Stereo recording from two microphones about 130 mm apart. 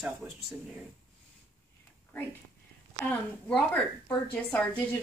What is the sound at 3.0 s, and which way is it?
A woman's voice, 5° left (ahead or behind).